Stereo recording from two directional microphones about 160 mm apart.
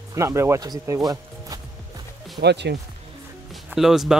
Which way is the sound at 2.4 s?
90° right.